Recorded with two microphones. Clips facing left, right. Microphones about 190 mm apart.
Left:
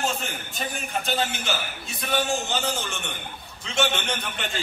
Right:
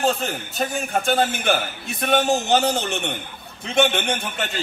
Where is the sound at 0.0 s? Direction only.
35° right (ahead or behind); by 4.1 s 55° right (ahead or behind).